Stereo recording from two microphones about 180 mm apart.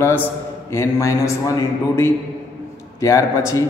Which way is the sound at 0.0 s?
10° left (ahead or behind).